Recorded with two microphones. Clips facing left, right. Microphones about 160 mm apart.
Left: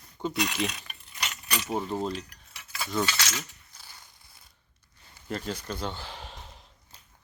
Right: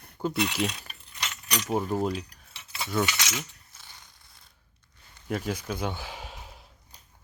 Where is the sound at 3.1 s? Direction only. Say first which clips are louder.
Even; 15° right (ahead or behind).